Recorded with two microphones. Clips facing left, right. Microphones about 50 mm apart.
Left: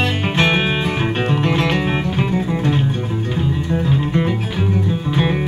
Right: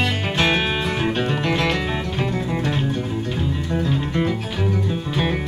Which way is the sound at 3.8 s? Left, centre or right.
Centre.